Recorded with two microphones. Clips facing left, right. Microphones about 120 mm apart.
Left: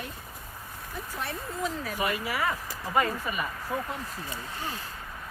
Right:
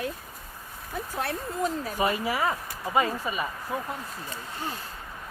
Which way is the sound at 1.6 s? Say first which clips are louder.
Right 4 dB; 30° right (ahead or behind).